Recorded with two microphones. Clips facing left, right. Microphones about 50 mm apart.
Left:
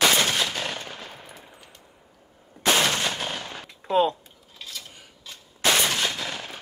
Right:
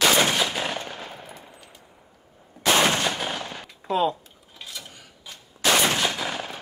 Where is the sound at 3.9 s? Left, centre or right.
Centre.